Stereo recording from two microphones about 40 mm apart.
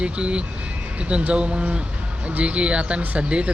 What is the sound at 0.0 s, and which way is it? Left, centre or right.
Speech, right.